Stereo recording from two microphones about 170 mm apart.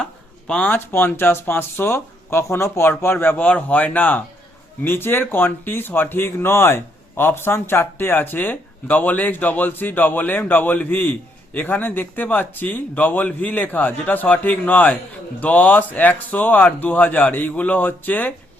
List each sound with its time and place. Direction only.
0.0 s speech: 5° left (ahead or behind)